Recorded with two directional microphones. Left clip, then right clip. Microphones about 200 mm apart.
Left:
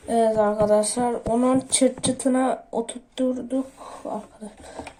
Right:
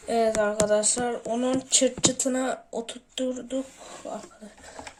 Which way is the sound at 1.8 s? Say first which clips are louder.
Left 2 dB; 25° right (ahead or behind).